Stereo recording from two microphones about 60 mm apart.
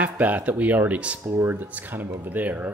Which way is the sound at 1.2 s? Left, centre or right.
Right.